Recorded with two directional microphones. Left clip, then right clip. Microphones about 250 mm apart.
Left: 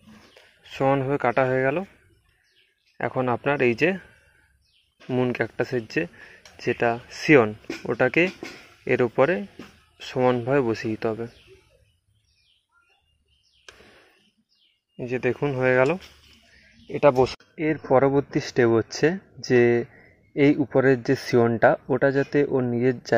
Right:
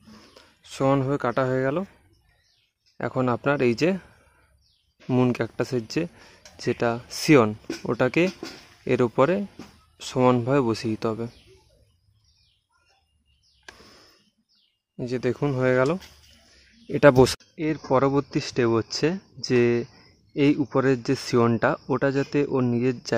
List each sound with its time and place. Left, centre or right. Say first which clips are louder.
0.7 s speech: left 1 dB; centre
3.0 s speech: left 1 dB; centre
5.0 s speech: right 1 dB; right
15.0 s speech: left 1 dB; centre
16.8 s speech: right 2 dB; right
17.6 s speech: left 3 dB; centre